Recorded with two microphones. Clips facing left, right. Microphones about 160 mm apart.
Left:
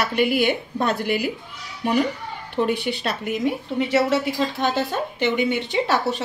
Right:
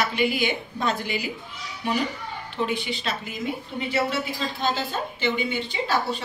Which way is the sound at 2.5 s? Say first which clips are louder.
Left 5 dB; 60° left (ahead or behind).